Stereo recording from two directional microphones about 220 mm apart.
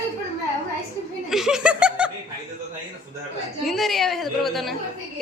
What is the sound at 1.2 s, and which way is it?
Speech, centre (ahead or behind).